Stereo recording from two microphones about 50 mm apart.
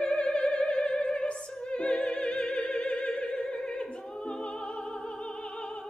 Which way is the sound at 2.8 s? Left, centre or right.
Centre.